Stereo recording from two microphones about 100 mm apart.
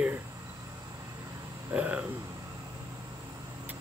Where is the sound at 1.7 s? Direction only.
15° right (ahead or behind).